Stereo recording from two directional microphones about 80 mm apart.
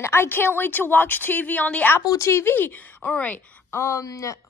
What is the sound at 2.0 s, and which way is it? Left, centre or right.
A woman's voice, left.